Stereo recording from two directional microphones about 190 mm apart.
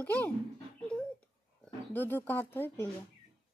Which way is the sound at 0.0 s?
10° left (ahead or behind).